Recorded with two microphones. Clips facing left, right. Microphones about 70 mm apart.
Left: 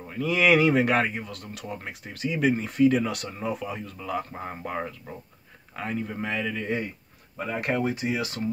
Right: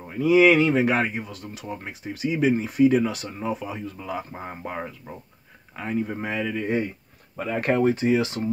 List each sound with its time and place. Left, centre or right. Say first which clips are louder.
0.3 s speech: right 4 dB; centre
5.9 s speech: right 4 dB; centre
7.3 s speech: right 4 dB; right